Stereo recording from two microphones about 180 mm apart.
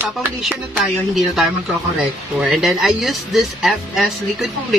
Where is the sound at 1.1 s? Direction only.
Centre (ahead or behind).